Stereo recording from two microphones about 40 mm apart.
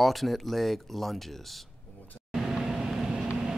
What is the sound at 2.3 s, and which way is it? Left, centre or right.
Vehicle, centre.